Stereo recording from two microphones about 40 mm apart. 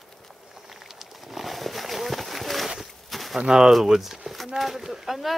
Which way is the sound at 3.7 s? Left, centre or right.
Centre.